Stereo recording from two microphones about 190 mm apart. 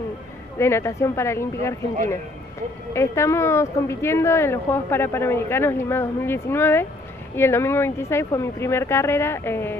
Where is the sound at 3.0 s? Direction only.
15° left (ahead or behind).